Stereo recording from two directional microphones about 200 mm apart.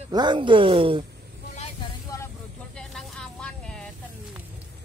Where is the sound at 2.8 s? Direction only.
Centre (ahead or behind).